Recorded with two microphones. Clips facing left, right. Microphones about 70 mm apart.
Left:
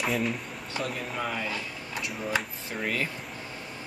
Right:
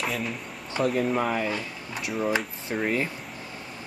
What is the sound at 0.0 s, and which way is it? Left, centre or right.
Speech, centre.